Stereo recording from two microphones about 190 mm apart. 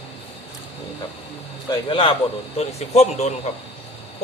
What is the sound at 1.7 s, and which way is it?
A man's voice, 25° left (ahead or behind).